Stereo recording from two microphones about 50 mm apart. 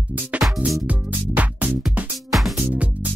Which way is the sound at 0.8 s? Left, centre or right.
Right.